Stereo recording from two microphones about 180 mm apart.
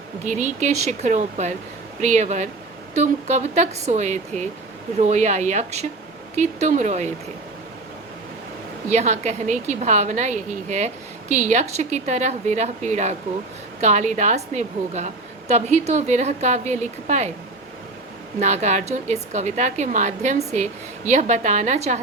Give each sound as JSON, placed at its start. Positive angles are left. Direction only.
{"t": 0.3, "sound": "a woman's voice", "side_deg": -40}
{"t": 8.9, "sound": "a woman's voice", "side_deg": -40}
{"t": 18.3, "sound": "a woman's voice", "side_deg": -40}